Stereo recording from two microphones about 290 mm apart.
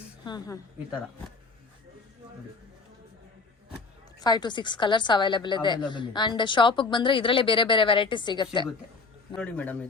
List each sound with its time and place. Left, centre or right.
0.3 s a woman's voice: centre
4.2 s a woman's voice: centre
9.3 s speech: centre